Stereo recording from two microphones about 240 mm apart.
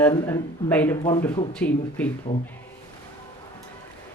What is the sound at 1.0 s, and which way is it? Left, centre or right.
Speech, centre.